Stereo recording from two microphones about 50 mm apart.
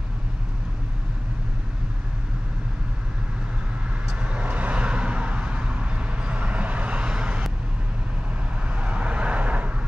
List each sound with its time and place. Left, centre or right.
4.2 s vehicle: right
8.6 s vehicle: right